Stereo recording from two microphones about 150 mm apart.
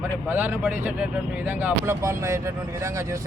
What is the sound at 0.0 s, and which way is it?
Speech, 10° right (ahead or behind).